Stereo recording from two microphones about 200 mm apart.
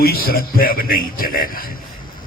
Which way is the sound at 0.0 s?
50° left (ahead or behind).